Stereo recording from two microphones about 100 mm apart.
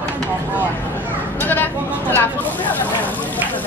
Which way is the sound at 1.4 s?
20° left (ahead or behind).